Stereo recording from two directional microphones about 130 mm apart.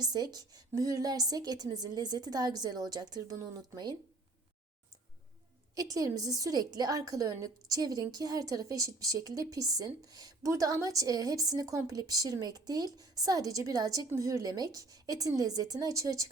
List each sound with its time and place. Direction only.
0.0 s a woman's voice: 30° right (ahead or behind)
5.7 s a woman's voice: 30° right (ahead or behind)